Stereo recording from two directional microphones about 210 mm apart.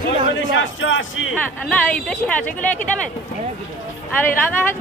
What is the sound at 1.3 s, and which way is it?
Speech, 5° left (ahead or behind).